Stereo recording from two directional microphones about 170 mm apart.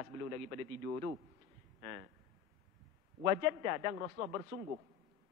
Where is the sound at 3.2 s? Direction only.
20° right (ahead or behind).